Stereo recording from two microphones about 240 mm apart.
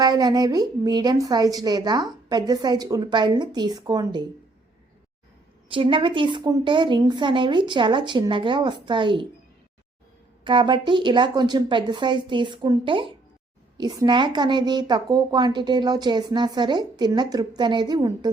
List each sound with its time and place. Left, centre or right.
0.0 s speech: centre
5.6 s a woman's voice: right
10.4 s a woman's voice: centre